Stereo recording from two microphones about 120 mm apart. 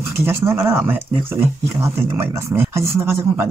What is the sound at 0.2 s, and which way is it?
Speech, 20° right (ahead or behind).